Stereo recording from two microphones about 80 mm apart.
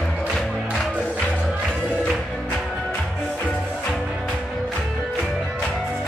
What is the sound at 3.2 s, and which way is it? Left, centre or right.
Music, centre.